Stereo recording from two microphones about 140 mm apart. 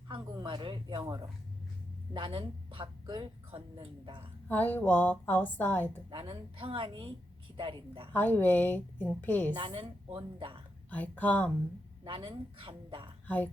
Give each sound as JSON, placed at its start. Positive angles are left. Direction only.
{"t": 0.1, "sound": "speech", "side_deg": -35}
{"t": 4.4, "sound": "a woman's voice", "side_deg": 15}
{"t": 6.1, "sound": "speech", "side_deg": -40}
{"t": 8.1, "sound": "a woman's voice", "side_deg": 15}
{"t": 9.5, "sound": "speech", "side_deg": -35}
{"t": 10.8, "sound": "a woman's voice", "side_deg": 10}
{"t": 12.0, "sound": "speech", "side_deg": -40}
{"t": 13.2, "sound": "a woman's voice", "side_deg": 10}